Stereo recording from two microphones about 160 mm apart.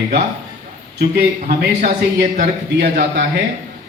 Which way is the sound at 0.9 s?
80° right.